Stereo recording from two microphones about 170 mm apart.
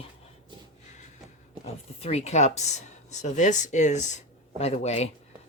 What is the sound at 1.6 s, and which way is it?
Speech, 35° left (ahead or behind).